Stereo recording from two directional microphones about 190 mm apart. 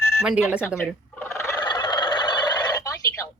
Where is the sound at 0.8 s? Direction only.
15° left (ahead or behind).